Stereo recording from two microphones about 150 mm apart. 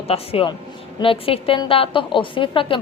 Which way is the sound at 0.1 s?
40° left (ahead or behind).